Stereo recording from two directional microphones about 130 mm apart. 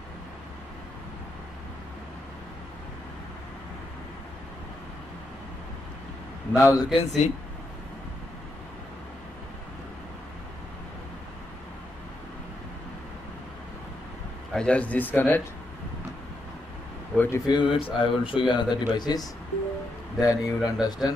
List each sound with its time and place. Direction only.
6.5 s a man's voice: 25° left (ahead or behind)
6.9 s speech: 45° left (ahead or behind)
14.5 s speech: 10° left (ahead or behind)
17.1 s speech: 10° left (ahead or behind)
17.5 s speech: 40° left (ahead or behind)
18.5 s a man's voice: 30° left (ahead or behind)